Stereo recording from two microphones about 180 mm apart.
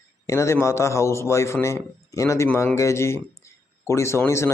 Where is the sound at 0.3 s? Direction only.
15° left (ahead or behind).